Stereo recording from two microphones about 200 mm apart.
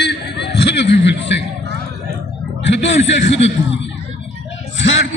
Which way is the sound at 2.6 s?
65° left (ahead or behind).